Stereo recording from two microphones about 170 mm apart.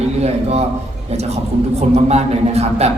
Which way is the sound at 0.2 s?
40° right (ahead or behind).